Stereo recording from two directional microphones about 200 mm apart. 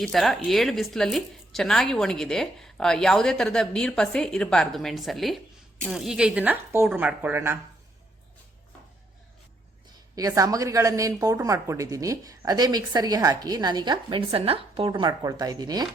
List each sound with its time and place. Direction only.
0.0 s speech: centre (ahead or behind)
9.9 s a woman's voice: 20° right (ahead or behind)